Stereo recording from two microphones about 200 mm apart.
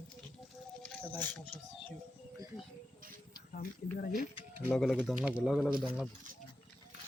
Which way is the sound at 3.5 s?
45° left (ahead or behind).